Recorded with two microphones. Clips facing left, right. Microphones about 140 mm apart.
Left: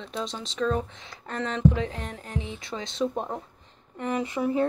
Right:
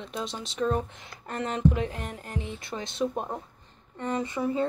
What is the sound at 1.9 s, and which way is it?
Speech, 10° right (ahead or behind).